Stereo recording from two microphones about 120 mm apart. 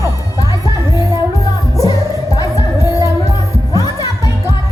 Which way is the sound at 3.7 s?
30° left (ahead or behind).